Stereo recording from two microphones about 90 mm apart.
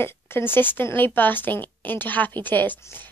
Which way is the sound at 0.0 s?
25° left (ahead or behind).